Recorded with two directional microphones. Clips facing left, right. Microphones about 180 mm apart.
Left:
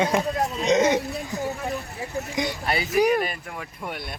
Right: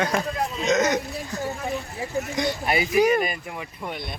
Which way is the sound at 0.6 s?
30° left (ahead or behind).